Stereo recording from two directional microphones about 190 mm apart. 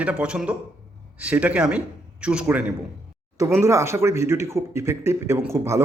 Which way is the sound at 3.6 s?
15° right (ahead or behind).